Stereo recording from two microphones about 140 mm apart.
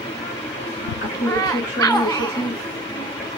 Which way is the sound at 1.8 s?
25° left (ahead or behind).